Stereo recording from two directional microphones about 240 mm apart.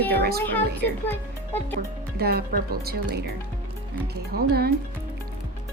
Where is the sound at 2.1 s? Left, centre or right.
Right.